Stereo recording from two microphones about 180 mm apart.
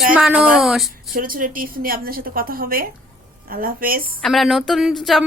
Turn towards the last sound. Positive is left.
turn(degrees=0)  # may be behind; listen again after turning